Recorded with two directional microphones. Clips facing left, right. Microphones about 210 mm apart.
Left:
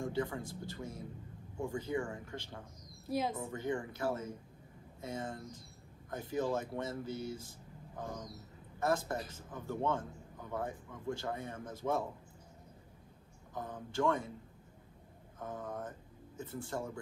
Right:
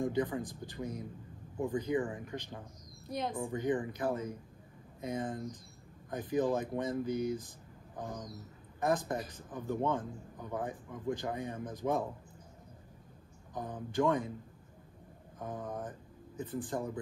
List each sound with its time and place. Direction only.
0.0 s speech: 20° right (ahead or behind)
3.1 s a woman's voice: 5° left (ahead or behind)
3.4 s a man's voice: 15° right (ahead or behind)
13.9 s a man's voice: 20° right (ahead or behind)
15.3 s a man's voice: 15° right (ahead or behind)